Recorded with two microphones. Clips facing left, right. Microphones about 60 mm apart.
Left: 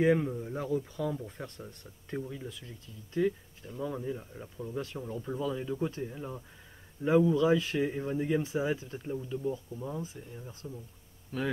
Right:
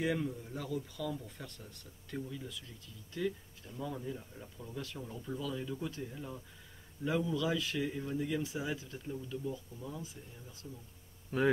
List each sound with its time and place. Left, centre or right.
0.0 s speech: left
11.3 s speech: centre